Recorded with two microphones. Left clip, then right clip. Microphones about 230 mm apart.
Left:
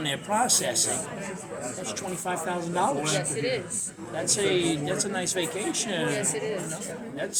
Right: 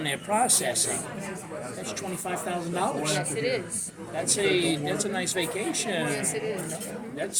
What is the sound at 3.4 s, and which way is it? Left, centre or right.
Speech, centre.